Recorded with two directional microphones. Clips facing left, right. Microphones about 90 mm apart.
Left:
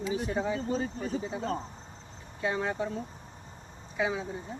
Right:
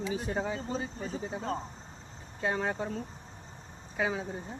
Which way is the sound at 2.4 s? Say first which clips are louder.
Left 1 dB; 30° right (ahead or behind).